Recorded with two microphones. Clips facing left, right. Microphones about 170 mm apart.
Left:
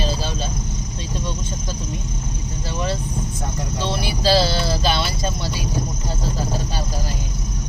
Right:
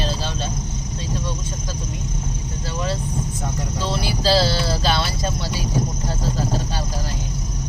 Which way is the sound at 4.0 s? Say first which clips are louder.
Left 1 dB; 20° left (ahead or behind).